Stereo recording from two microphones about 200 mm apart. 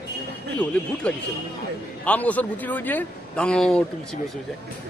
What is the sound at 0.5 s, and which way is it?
Speech, 5° left (ahead or behind).